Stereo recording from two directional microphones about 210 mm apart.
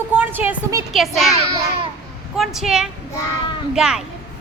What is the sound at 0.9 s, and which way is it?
A woman's voice, centre (ahead or behind).